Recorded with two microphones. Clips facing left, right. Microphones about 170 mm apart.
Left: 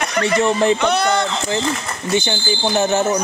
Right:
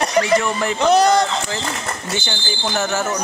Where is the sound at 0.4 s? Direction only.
25° left (ahead or behind).